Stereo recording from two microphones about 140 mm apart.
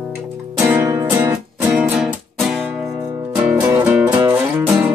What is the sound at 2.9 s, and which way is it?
Music, 25° right (ahead or behind).